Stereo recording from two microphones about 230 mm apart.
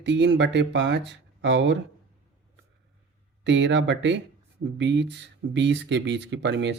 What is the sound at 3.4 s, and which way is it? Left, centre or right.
Speech, right.